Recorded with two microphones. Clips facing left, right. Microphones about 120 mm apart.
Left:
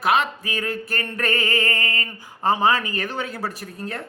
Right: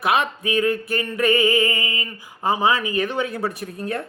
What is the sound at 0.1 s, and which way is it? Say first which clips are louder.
Speech: right 1 dB; 20° right (ahead or behind).